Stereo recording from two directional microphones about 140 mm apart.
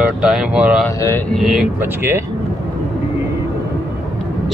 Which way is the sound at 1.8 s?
15° right (ahead or behind).